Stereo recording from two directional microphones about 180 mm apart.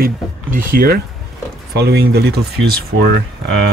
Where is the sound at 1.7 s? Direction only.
65° right (ahead or behind).